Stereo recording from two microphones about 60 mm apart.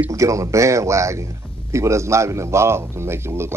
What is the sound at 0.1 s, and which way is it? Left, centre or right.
Speech, right.